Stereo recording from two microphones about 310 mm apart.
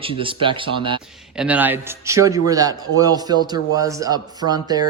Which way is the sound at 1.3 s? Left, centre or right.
Centre.